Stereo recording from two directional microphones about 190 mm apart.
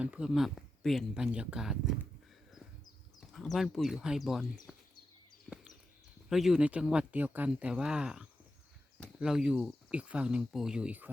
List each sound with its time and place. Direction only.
0.0 s speech: 5° right (ahead or behind)
3.2 s speech: centre (ahead or behind)
4.7 s a sound: centre (ahead or behind)
6.2 s speech: centre (ahead or behind)